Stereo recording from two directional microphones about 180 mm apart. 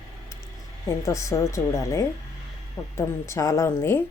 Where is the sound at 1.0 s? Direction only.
15° left (ahead or behind).